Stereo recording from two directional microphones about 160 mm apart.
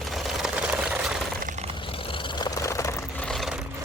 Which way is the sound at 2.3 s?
25° left (ahead or behind).